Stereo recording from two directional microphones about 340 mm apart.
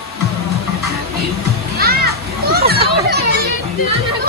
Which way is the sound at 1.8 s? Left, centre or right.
Right.